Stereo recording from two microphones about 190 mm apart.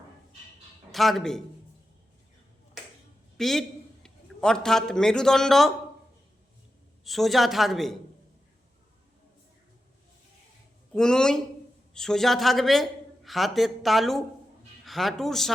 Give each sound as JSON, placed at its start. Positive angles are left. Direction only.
{"t": 0.9, "sound": "a man's voice", "side_deg": 0}
{"t": 3.3, "sound": "a man's voice", "side_deg": 0}
{"t": 7.0, "sound": "a man's voice", "side_deg": 0}
{"t": 10.9, "sound": "a man's voice", "side_deg": 5}